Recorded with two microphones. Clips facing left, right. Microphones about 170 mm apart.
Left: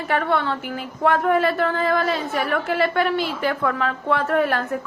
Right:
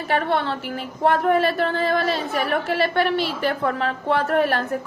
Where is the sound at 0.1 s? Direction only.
30° right (ahead or behind).